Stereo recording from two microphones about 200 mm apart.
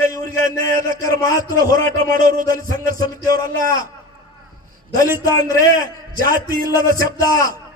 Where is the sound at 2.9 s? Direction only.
15° left (ahead or behind).